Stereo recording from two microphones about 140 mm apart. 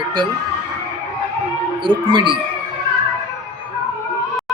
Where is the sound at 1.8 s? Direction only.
35° right (ahead or behind).